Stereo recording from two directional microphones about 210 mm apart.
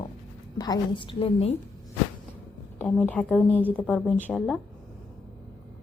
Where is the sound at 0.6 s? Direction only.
20° left (ahead or behind).